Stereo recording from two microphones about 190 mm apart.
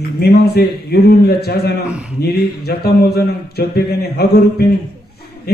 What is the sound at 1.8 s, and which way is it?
Speech, 5° right (ahead or behind).